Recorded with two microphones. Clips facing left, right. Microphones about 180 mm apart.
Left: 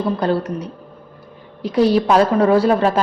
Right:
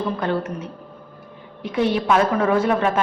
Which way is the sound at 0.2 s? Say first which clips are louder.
Left 4 dB; 35° left (ahead or behind).